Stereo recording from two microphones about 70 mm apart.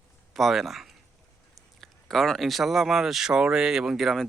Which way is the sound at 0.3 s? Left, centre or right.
Centre.